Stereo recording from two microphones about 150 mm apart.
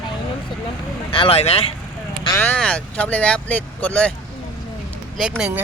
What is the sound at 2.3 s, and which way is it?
Speech, 10° left (ahead or behind).